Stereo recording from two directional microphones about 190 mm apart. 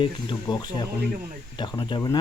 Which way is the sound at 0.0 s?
25° left (ahead or behind).